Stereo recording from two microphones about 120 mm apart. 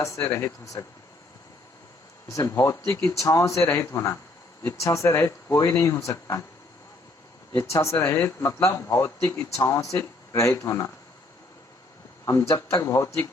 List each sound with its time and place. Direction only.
0.0 s speech: 25° left (ahead or behind)
2.3 s speech: 25° left (ahead or behind)
7.5 s speech: 25° left (ahead or behind)
12.2 s speech: 25° left (ahead or behind)